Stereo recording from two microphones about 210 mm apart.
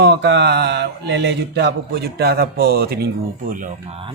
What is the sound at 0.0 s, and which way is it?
Mantra, 55° right (ahead or behind).